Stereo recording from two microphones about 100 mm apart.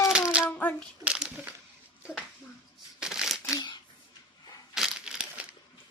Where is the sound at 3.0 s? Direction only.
5° right (ahead or behind).